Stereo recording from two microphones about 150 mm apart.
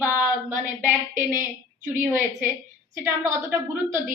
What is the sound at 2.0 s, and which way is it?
A woman's voice, 15° right (ahead or behind).